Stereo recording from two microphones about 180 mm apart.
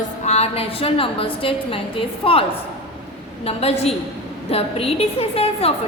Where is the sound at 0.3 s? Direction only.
35° left (ahead or behind).